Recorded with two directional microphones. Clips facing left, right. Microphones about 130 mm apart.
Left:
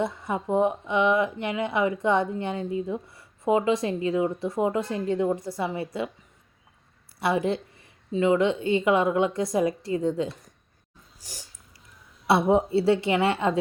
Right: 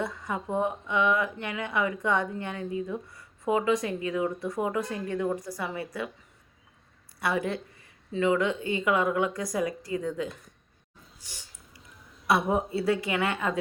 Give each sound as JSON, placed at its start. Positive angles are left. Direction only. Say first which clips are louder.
{"t": 0.0, "sound": "speech", "louder": "left 4 dB", "side_deg": 25}
{"t": 7.2, "sound": "speech", "louder": "left 4 dB", "side_deg": 25}
{"t": 11.2, "sound": "breathing", "louder": "left 6 dB", "side_deg": 40}
{"t": 12.3, "sound": "speech", "louder": "left 5 dB", "side_deg": 25}